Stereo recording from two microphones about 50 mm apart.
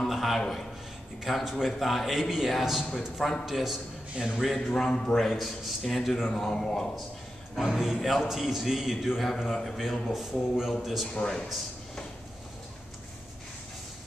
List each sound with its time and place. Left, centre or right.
0.1 s a sound: centre
1.2 s a man's voice: centre
1.7 s a man's voice: centre
4.2 s a man's voice: centre
4.6 s a man's voice: centre
5.1 s a man's voice: centre
6.3 s a man's voice: centre
7.5 s a man's voice: centre
11.1 s a man's voice: centre